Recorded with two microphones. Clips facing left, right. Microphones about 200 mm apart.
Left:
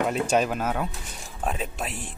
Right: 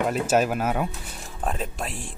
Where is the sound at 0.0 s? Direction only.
5° right (ahead or behind).